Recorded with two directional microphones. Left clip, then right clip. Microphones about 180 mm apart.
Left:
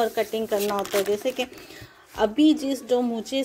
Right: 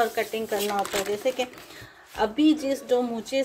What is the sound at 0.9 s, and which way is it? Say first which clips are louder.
A woman's voice: left 2 dB; 35° left (ahead or behind).